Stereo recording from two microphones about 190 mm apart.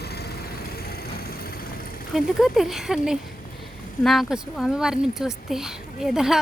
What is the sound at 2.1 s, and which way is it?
Speech, centre (ahead or behind).